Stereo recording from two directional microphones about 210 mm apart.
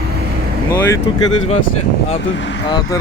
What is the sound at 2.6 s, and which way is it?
Speech, 20° left (ahead or behind).